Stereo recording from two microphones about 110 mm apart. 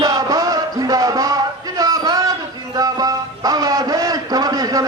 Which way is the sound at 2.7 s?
35° right (ahead or behind).